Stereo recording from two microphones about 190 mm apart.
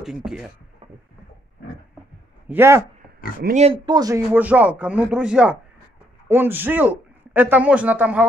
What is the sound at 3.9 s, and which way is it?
Speech, 20° right (ahead or behind).